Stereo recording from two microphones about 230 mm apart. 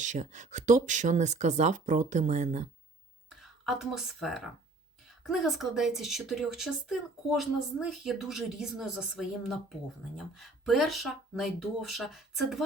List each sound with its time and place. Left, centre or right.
0.0 s speech: right
3.2 s speech: centre